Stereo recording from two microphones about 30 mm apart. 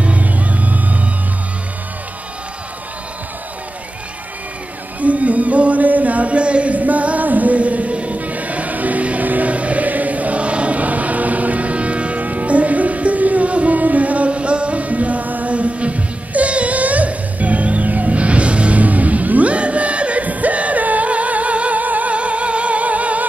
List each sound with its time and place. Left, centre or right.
0.0 s music: right
5.0 s a sound: right
8.3 s music: right
9.3 s choir: right
12.2 s music: right
13.7 s music: right
15.5 s music: right
18.8 s music: right
19.5 s music: right
22.1 s music: right